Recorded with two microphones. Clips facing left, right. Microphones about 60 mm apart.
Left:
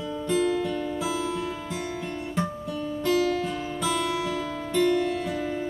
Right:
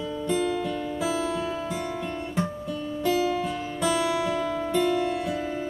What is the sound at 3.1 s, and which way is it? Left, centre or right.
Music, centre.